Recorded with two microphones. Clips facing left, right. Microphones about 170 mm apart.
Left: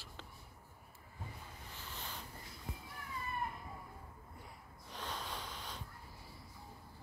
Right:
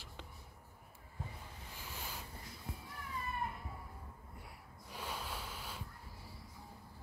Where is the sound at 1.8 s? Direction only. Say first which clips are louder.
Right 1 dB; 10° right (ahead or behind).